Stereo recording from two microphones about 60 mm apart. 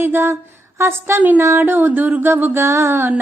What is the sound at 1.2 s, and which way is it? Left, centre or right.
A woman's voice, right.